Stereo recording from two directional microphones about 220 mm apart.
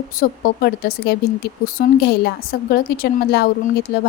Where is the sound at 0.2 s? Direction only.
45° left (ahead or behind).